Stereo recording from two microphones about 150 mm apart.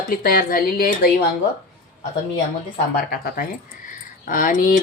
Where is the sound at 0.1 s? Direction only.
75° left (ahead or behind).